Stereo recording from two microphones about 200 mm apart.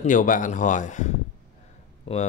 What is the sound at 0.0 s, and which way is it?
A man's voice, 40° left (ahead or behind).